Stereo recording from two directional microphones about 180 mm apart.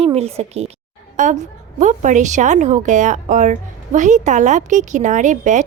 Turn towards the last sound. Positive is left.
turn(degrees=-45)  # may be behind; listen again after turning